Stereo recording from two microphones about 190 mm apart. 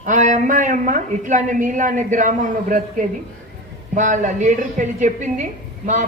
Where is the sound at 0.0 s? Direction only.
40° right (ahead or behind).